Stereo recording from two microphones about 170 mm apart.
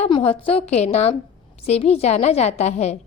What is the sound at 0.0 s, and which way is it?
A woman's voice, 35° left (ahead or behind).